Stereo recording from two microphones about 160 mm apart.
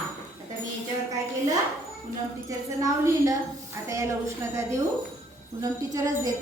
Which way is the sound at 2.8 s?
20° right (ahead or behind).